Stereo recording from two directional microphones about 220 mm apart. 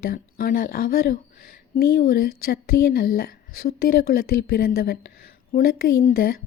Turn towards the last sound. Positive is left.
turn(degrees=40)  # may be behind; listen again after turning